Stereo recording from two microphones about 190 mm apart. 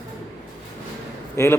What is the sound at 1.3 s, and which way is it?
Speech, 15° left (ahead or behind).